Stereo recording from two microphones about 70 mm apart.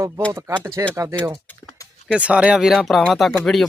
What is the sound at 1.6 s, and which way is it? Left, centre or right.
Typing, left.